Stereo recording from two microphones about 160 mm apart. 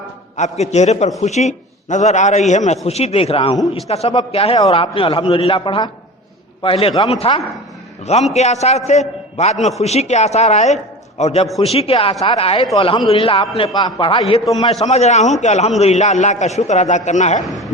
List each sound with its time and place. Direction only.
0.3 s a man's voice: 45° left (ahead or behind)
17.4 s speech: centre (ahead or behind)